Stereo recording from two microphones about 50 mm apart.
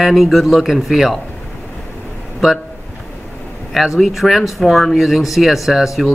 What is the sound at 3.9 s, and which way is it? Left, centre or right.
A man's voice, centre.